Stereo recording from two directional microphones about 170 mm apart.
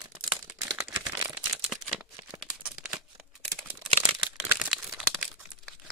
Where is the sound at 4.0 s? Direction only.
15° right (ahead or behind).